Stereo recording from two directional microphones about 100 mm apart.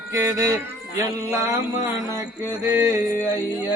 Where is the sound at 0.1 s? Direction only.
30° right (ahead or behind).